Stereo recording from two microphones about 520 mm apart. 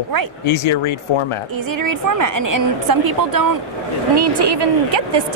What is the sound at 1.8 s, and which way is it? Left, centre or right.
A woman's voice, right.